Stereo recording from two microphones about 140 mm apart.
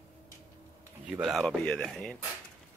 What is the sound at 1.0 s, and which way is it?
Speech, 5° right (ahead or behind).